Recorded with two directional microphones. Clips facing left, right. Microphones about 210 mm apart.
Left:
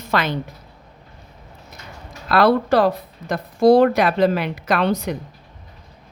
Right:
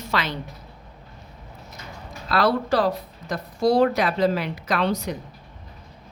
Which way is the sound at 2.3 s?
60° left (ahead or behind).